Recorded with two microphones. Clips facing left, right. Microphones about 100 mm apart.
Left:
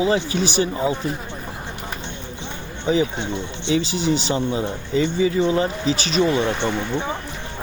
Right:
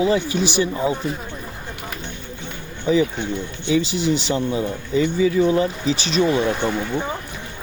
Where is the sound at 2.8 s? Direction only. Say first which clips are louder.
Right 2 dB; 30° left (ahead or behind).